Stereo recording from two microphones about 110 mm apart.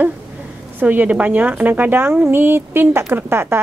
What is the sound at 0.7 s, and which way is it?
Speech, 15° right (ahead or behind).